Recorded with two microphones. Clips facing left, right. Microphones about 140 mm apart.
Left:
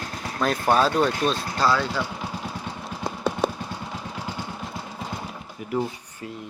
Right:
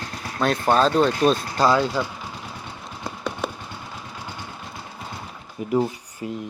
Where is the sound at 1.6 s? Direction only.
20° right (ahead or behind).